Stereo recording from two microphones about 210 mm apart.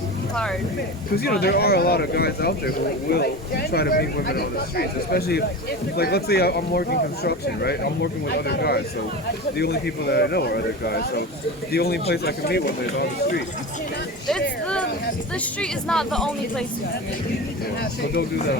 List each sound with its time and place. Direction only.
1.1 s speech: 50° left (ahead or behind)
15.6 s speech: 5° left (ahead or behind)
17.7 s speech: 50° left (ahead or behind)